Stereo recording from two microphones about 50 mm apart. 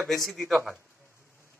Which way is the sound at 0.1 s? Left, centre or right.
Centre.